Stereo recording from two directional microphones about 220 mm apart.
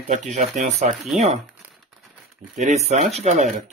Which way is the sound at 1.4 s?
Centre (ahead or behind).